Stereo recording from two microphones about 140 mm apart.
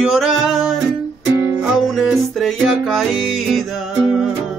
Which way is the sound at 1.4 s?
20° right (ahead or behind).